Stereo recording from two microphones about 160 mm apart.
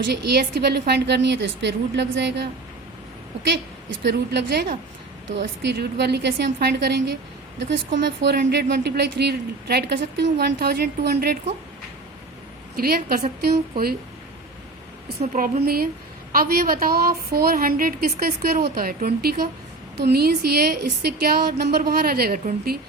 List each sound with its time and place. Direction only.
0.0 s a woman's voice: 90° right
4.0 s a woman's voice: 90° right
12.7 s a woman's voice: 70° right (ahead or behind)
15.2 s a woman's voice: 50° right (ahead or behind)
15.6 s a woman's voice: 70° right (ahead or behind)